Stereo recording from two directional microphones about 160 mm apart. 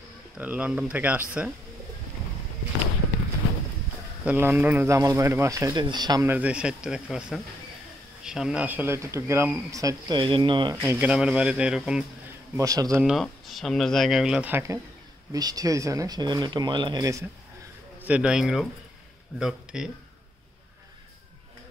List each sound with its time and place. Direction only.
0.4 s speech: 10° right (ahead or behind)
4.2 s speech: 10° right (ahead or behind)
6.2 s speech: 10° right (ahead or behind); by 10.8 s 30° right (ahead or behind)
10.8 s speech: 10° right (ahead or behind)
12.5 s speech: 20° right (ahead or behind)
13.0 s speech: centre (ahead or behind); by 17.2 s 25° right (ahead or behind)
18.0 s speech: 5° right (ahead or behind)